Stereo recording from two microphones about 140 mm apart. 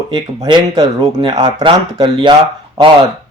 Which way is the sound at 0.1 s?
30° right (ahead or behind).